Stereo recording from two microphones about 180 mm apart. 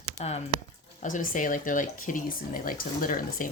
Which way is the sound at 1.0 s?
45° left (ahead or behind).